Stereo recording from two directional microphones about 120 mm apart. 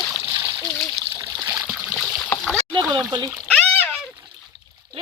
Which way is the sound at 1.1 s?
35° right (ahead or behind).